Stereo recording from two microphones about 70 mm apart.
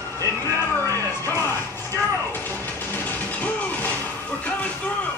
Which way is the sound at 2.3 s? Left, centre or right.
Left.